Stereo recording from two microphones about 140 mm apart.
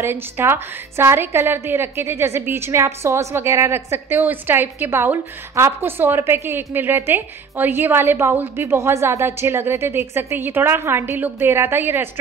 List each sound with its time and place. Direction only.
0.0 s a woman's voice: 15° right (ahead or behind)